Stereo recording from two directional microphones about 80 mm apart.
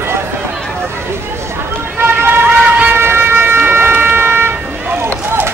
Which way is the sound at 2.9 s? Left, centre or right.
Right.